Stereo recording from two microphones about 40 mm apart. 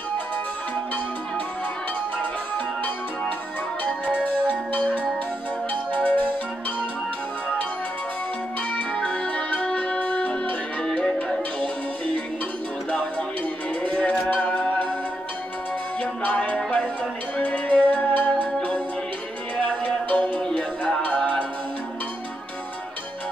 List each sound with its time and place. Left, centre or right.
2.5 s music: left
8.9 s music: left
13.8 s music: left
16.0 s music: left
17.6 s music: left